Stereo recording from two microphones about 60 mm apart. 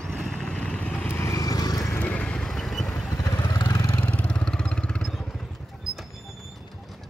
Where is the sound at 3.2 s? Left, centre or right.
Left.